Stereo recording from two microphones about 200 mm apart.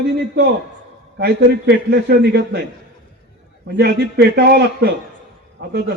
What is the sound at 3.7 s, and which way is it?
Speech, 55° right (ahead or behind).